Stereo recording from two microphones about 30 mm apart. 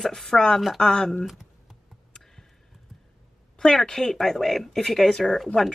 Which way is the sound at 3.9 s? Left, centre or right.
Centre.